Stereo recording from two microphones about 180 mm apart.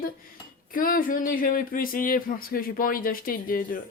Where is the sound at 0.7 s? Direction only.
50° left (ahead or behind).